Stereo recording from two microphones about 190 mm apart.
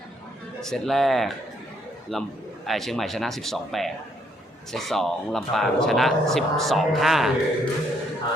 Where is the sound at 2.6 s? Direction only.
Centre (ahead or behind).